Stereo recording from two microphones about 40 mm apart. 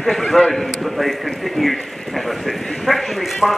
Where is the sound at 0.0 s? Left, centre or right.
Centre.